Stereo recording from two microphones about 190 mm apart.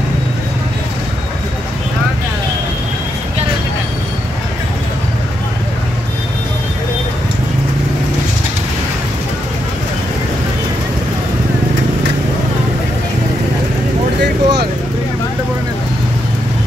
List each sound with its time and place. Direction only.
14.2 s vehicle: 60° right (ahead or behind)